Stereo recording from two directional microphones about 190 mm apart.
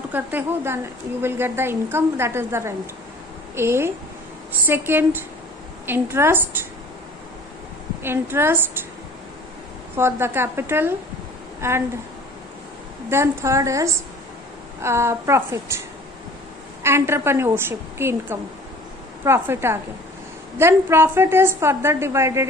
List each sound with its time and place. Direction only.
0.1 s a woman's voice: 10° right (ahead or behind)
8.0 s a woman's voice: 10° right (ahead or behind)
9.9 s a woman's voice: 10° right (ahead or behind)
13.1 s a woman's voice: 15° right (ahead or behind)
16.8 s a woman's voice: 15° right (ahead or behind)